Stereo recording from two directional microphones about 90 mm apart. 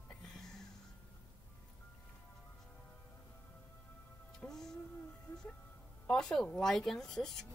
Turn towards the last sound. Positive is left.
turn(degrees=5)  # may be behind; listen again after turning